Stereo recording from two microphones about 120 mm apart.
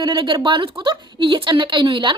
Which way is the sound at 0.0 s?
40° right (ahead or behind).